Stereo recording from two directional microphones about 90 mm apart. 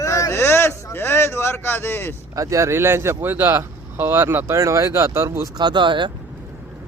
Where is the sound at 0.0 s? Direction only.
35° left (ahead or behind).